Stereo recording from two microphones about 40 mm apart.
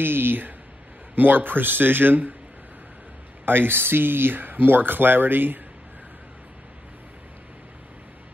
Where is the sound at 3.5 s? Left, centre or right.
Right.